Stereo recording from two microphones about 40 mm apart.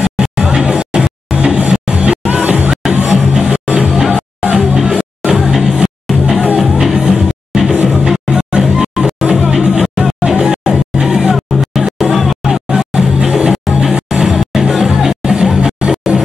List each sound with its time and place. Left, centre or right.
0.0 s music: centre
8.1 s music: centre
11.3 s music: centre
12.4 s music: centre